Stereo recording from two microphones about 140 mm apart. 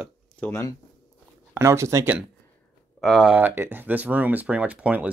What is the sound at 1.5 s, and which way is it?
Speech, 20° right (ahead or behind).